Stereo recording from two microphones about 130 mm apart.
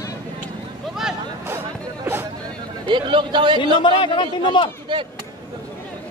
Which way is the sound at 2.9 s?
40° right (ahead or behind).